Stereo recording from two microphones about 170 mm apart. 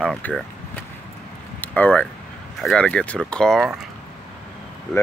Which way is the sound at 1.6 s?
10° left (ahead or behind).